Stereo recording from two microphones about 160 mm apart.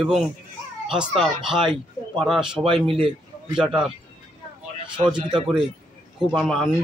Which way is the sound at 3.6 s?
5° right (ahead or behind).